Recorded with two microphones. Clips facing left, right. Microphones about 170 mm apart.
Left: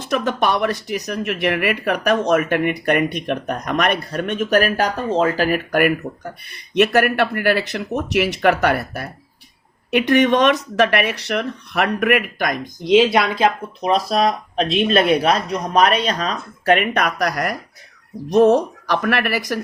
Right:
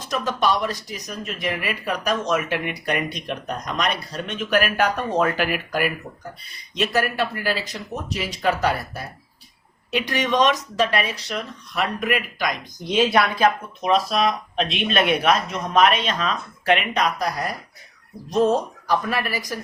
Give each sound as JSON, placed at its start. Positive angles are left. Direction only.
{"t": 0.1, "sound": "speech", "side_deg": 60}
{"t": 4.9, "sound": "speech", "side_deg": 25}
{"t": 5.5, "sound": "speech", "side_deg": 55}
{"t": 6.4, "sound": "speech", "side_deg": 65}
{"t": 12.8, "sound": "speech", "side_deg": 20}
{"t": 13.8, "sound": "speech", "side_deg": 40}